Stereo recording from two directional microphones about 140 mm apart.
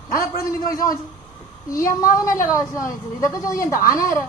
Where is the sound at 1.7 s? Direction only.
20° left (ahead or behind).